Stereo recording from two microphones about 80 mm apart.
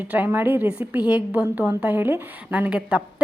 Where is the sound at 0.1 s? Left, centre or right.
Right.